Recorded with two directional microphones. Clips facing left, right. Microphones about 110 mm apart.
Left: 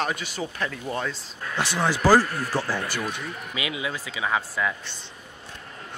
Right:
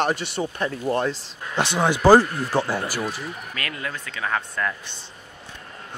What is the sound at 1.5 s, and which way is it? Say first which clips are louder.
Speech: right 3 dB; 20° right (ahead or behind).